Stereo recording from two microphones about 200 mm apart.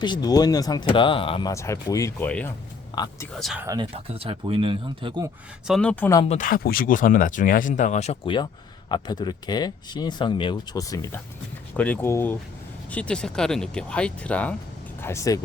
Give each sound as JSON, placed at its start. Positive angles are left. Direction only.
{"t": 0.0, "sound": "speech", "side_deg": 20}
{"t": 2.9, "sound": "a man's voice", "side_deg": 20}
{"t": 3.3, "sound": "speech", "side_deg": 0}
{"t": 3.7, "sound": "speech", "side_deg": -25}
{"t": 5.6, "sound": "speech", "side_deg": 0}
{"t": 6.2, "sound": "speech", "side_deg": 40}